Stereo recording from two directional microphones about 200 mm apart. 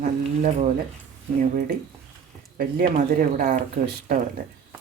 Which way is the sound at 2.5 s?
45° right (ahead or behind).